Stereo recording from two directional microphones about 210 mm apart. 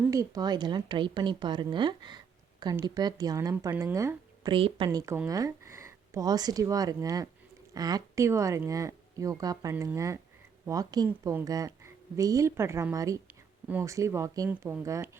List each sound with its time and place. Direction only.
0.0 s a woman's voice: 15° right (ahead or behind)